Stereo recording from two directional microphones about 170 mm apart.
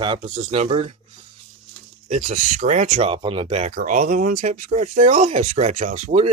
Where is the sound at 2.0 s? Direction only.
45° right (ahead or behind).